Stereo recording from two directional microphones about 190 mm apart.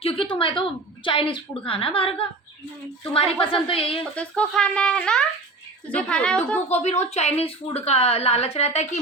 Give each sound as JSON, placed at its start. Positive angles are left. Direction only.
{"t": 0.0, "sound": "a woman's voice", "side_deg": 30}
{"t": 4.1, "sound": "speech", "side_deg": 5}
{"t": 6.7, "sound": "a woman's voice", "side_deg": 35}